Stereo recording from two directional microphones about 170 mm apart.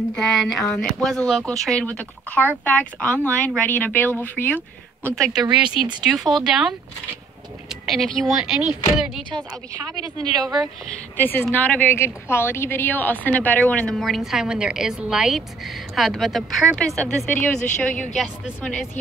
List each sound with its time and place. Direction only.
0.1 s a woman's voice: centre (ahead or behind)
7.8 s a woman's voice: centre (ahead or behind)
9.3 s a woman's voice: 20° right (ahead or behind)
11.1 s a woman's voice: 10° left (ahead or behind)